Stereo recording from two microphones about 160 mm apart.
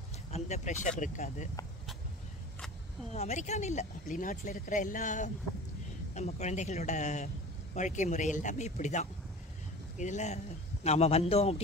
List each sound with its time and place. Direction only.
0.3 s speech: 45° left (ahead or behind)
3.2 s a man's voice: 45° left (ahead or behind)